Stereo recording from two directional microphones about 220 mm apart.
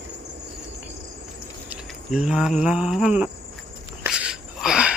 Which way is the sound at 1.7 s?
5° right (ahead or behind).